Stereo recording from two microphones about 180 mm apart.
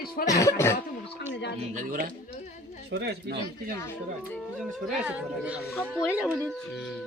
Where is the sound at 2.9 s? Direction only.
65° right (ahead or behind).